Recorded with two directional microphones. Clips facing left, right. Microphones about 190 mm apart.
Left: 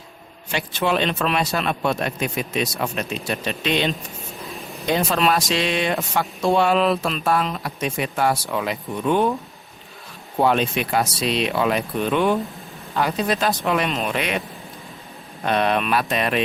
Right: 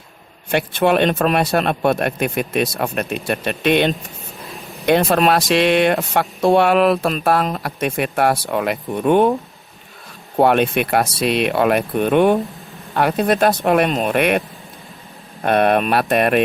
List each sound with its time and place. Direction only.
0.5 s speech: 55° right (ahead or behind)
4.4 s a sound: centre (ahead or behind)
4.9 s speech: 60° right (ahead or behind)
10.3 s speech: 60° right (ahead or behind)
15.4 s speech: 55° right (ahead or behind)